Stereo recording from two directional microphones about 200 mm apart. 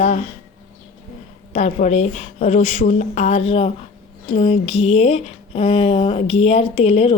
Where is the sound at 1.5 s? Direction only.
35° left (ahead or behind).